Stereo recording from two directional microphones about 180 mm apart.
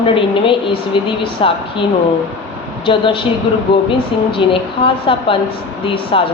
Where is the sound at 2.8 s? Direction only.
30° left (ahead or behind).